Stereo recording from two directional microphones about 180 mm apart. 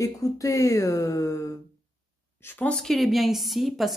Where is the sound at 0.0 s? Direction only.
15° left (ahead or behind).